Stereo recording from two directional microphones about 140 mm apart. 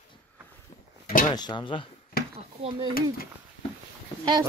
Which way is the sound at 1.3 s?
30° left (ahead or behind).